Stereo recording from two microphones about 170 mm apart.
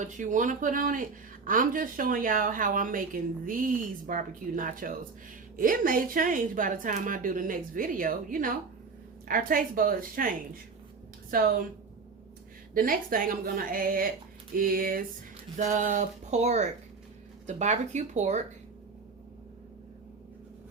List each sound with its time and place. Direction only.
0.0 s a woman's voice: 45° right (ahead or behind)
12.7 s a woman's voice: 55° right (ahead or behind)